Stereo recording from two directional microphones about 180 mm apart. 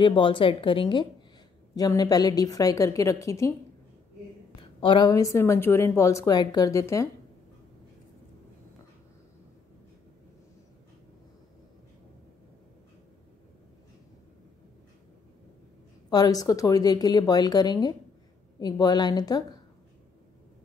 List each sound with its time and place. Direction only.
0.0 s a woman's voice: 30° left (ahead or behind)
4.6 s a woman's voice: 30° left (ahead or behind)
16.1 s a woman's voice: 20° left (ahead or behind)